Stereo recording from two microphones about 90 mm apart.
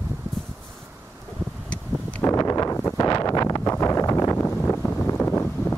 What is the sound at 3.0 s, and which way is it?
Wind noise, 45° left (ahead or behind).